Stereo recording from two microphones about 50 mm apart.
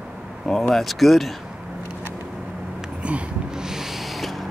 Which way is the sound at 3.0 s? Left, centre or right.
Right.